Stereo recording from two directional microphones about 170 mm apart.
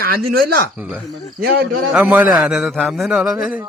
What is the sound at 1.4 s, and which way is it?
Speech, 70° right (ahead or behind).